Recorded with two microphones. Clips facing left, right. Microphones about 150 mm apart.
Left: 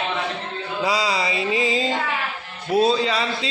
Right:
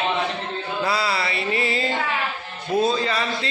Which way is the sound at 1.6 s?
90° left.